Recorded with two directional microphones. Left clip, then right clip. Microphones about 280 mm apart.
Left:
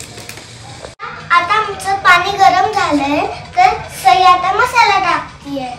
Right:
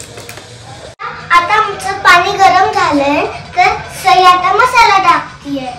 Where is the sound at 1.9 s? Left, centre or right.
Centre.